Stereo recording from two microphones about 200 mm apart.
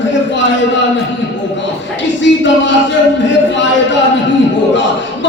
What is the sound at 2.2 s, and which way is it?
Music, 65° left (ahead or behind).